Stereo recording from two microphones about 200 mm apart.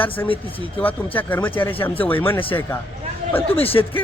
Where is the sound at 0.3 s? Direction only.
25° left (ahead or behind).